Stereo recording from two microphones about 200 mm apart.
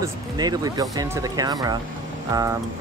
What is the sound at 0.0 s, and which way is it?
Speech, 20° right (ahead or behind).